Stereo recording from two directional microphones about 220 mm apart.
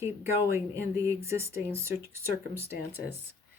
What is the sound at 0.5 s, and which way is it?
Speech, 10° right (ahead or behind).